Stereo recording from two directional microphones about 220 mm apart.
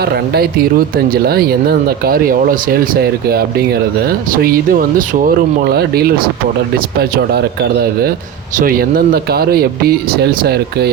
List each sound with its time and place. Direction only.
0.0 s speech: 45° right (ahead or behind)
2.9 s speech: 45° right (ahead or behind)